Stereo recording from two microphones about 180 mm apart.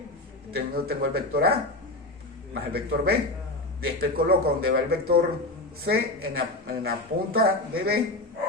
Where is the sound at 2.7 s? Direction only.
60° right (ahead or behind).